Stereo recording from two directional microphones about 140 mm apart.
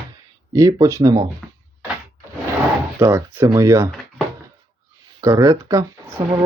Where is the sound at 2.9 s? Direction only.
15° right (ahead or behind).